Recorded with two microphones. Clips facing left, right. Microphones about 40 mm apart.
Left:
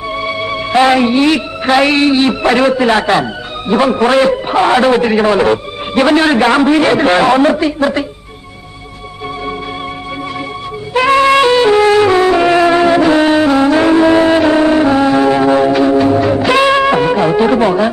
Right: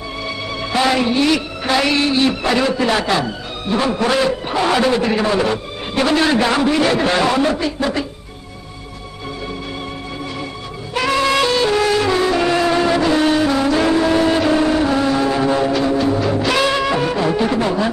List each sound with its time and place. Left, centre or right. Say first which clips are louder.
0.2 s a man's voice: left 5 dB; left
11.1 s music: left 7 dB; left